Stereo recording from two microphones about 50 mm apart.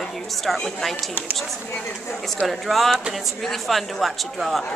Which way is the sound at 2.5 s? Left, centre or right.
Centre.